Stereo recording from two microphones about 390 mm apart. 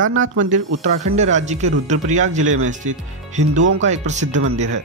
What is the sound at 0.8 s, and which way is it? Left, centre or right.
Speech, centre.